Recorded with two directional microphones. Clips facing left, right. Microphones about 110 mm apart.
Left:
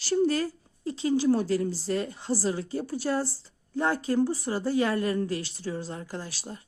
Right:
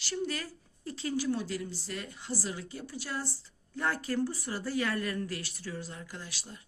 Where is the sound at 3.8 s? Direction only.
25° left (ahead or behind).